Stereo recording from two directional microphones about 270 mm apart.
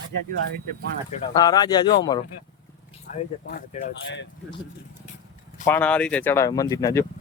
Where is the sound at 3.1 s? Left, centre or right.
Left.